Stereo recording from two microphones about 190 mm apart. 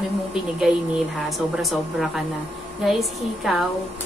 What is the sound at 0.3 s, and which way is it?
A woman's voice, centre (ahead or behind).